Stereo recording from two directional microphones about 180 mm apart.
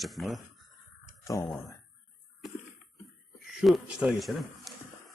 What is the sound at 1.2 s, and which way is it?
Speech, 20° left (ahead or behind).